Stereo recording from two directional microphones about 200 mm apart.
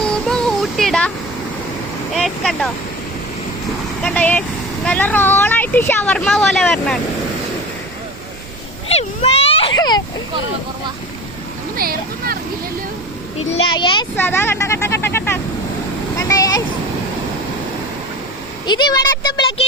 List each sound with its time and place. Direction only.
0.0 s music: 5° left (ahead or behind)
2.1 s speech: centre (ahead or behind)
4.0 s speech: 10° left (ahead or behind)
8.9 s a sound: 30° left (ahead or behind)
11.8 s speech: 50° right (ahead or behind)
13.5 s speech: 25° left (ahead or behind)
14.2 s speech: 10° left (ahead or behind)
16.1 s a sound: 15° left (ahead or behind)
18.6 s speech: 20° left (ahead or behind)